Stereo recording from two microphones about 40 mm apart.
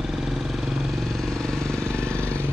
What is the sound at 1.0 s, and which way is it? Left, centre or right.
Vehicle, centre.